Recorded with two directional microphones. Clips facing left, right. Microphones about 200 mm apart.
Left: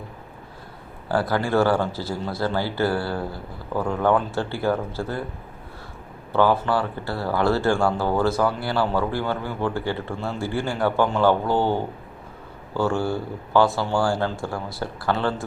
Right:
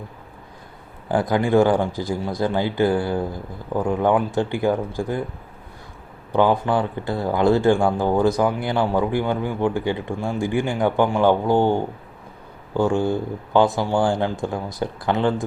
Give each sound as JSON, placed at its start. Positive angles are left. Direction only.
{"t": 1.0, "sound": "speech", "side_deg": -15}
{"t": 6.3, "sound": "speech", "side_deg": -15}